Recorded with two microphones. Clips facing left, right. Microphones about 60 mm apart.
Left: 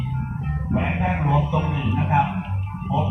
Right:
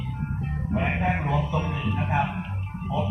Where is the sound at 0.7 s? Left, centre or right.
Centre.